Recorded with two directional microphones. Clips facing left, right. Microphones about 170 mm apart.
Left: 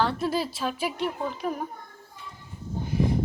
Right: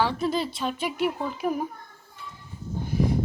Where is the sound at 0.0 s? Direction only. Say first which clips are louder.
Right 1 dB; 5° left (ahead or behind).